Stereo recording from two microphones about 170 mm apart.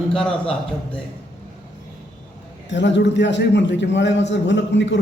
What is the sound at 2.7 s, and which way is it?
A man's voice, 90° left.